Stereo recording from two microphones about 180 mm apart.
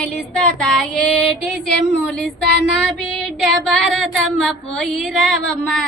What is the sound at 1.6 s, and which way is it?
Speech, 70° left (ahead or behind).